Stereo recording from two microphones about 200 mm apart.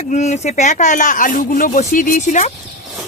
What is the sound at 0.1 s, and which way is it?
Speech, 35° left (ahead or behind).